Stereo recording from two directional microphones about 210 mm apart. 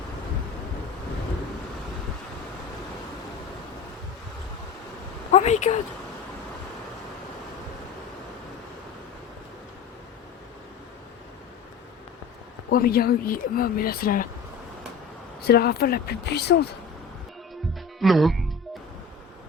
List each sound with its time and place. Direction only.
5.3 s speech: 35° left (ahead or behind)
12.7 s speech: 45° left (ahead or behind)
15.4 s speech: 50° left (ahead or behind)
18.0 s speech: centre (ahead or behind)